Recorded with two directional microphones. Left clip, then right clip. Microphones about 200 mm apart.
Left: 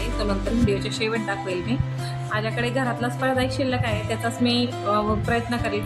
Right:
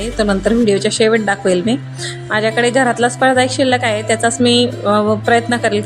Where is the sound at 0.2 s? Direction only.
30° right (ahead or behind).